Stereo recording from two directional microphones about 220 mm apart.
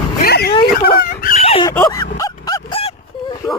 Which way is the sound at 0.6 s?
40° left (ahead or behind).